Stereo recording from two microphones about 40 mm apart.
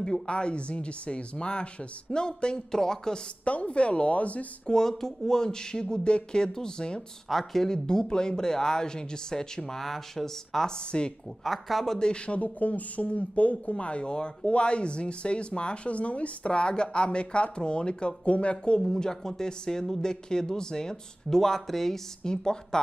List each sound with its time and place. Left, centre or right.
0.3 s speech: left
3.4 s a woman's voice: left
4.6 s speech: centre
7.2 s speech: centre
10.8 s speech: left
11.4 s speech: centre
12.0 s speech: left
12.4 s a woman's voice: left
18.8 s speech: centre